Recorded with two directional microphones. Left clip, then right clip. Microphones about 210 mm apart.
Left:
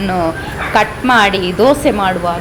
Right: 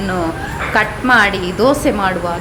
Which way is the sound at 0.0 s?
Centre (ahead or behind).